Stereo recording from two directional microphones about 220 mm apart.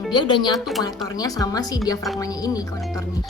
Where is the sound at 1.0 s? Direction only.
15° left (ahead or behind).